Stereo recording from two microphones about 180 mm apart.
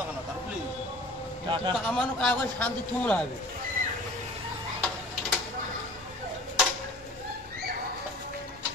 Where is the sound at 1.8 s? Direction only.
5° left (ahead or behind).